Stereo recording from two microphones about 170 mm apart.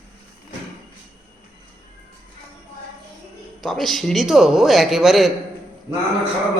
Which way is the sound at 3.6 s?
Centre (ahead or behind).